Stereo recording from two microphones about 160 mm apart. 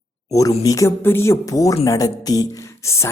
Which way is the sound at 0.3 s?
20° left (ahead or behind).